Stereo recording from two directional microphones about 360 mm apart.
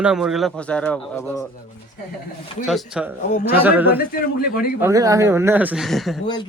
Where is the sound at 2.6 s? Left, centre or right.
Centre.